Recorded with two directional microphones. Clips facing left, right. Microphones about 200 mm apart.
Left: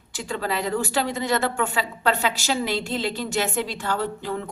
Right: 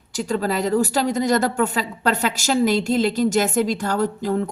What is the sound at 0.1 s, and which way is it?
Speech, 40° right (ahead or behind).